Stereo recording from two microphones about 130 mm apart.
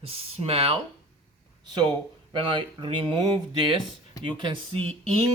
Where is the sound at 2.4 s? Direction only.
40° right (ahead or behind).